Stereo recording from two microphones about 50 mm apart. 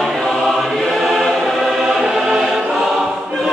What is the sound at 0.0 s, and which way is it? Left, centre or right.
Choir, centre.